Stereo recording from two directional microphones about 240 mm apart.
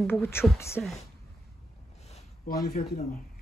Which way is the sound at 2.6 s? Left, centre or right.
Left.